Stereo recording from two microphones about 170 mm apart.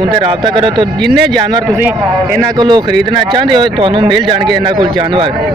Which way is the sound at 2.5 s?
25° right (ahead or behind).